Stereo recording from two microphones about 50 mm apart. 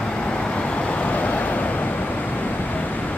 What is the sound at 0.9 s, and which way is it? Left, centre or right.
Vehicle, left.